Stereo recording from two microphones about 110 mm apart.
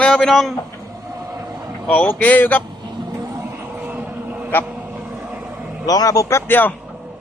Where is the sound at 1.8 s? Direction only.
10° left (ahead or behind).